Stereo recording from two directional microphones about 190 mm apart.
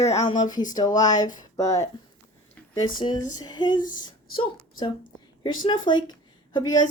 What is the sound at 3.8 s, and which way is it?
Speech, 45° left (ahead or behind).